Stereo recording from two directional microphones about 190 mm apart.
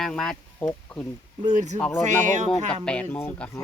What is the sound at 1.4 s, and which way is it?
Speech, 40° right (ahead or behind).